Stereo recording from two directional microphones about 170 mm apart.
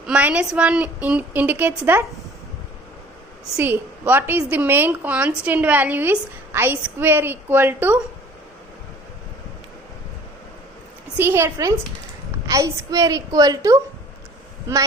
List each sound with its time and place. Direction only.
0.0 s a woman's voice: 5° right (ahead or behind)
3.6 s a woman's voice: 10° right (ahead or behind)
11.2 s a woman's voice: 15° right (ahead or behind)